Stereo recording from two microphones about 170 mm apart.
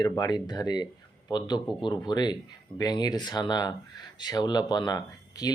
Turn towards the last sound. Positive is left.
turn(degrees=20)  # may be behind; listen again after turning